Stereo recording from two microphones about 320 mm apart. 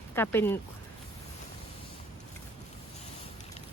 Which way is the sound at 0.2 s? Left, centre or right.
Centre.